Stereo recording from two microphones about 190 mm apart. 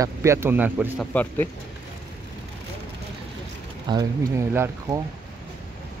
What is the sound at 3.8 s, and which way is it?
Speech, 20° right (ahead or behind).